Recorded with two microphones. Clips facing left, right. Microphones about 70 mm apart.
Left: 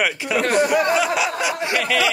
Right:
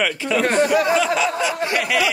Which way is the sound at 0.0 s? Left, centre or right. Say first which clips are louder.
Right 1 dB; centre.